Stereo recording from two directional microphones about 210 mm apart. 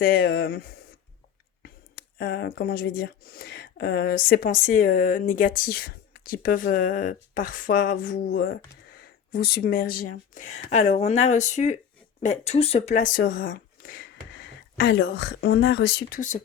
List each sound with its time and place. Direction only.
0.0 s speech: 45° left (ahead or behind)
1.6 s speech: 45° left (ahead or behind)
14.3 s speech: 60° left (ahead or behind); by 16.4 s 40° left (ahead or behind)